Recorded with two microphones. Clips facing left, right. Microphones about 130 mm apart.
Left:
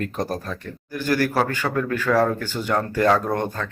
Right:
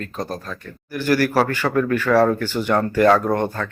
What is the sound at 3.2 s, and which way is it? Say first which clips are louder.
Speech: right 4 dB; 15° right (ahead or behind).